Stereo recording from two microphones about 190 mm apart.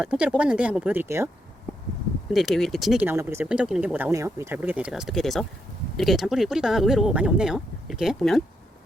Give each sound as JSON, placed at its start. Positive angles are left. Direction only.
{"t": 0.0, "sound": "speech", "side_deg": -5}
{"t": 2.3, "sound": "speech", "side_deg": 0}